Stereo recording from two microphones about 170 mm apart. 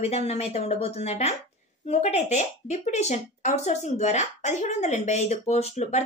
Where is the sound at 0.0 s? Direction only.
40° left (ahead or behind).